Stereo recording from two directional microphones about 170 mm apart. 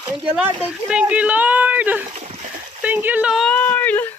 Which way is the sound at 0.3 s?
5° right (ahead or behind).